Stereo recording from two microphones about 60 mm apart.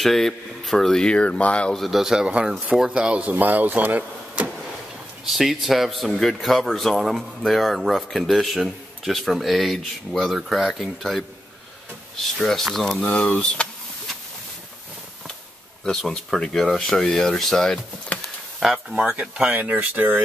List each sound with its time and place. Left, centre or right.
0.0 s speech: centre
1.7 s speech: centre
2.2 s speech: centre
5.2 s speech: centre
13.0 s speech: centre
15.8 s speech: centre
18.1 s a sound: left
18.6 s speech: centre
19.1 s speech: right